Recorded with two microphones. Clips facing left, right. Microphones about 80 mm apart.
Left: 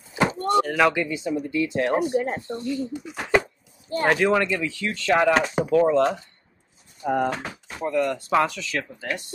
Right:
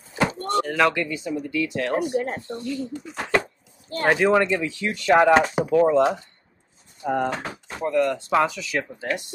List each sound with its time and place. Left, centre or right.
0.5 s speech: centre
1.0 s speech: left
3.1 s chopping: centre
4.1 s speech: centre
7.0 s speech: centre
9.0 s speech: right